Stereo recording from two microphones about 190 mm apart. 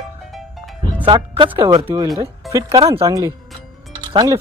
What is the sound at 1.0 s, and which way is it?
Speech, 25° right (ahead or behind).